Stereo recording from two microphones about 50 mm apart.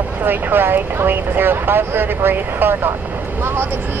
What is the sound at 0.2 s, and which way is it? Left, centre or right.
Speech, right.